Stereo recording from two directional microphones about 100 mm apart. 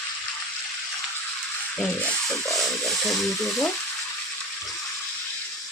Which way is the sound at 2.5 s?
Centre (ahead or behind).